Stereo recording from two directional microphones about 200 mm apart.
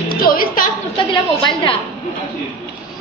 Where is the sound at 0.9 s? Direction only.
25° left (ahead or behind).